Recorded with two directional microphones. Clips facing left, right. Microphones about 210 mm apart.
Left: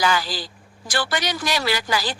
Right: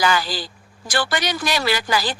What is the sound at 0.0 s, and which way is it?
Speech, 60° right (ahead or behind).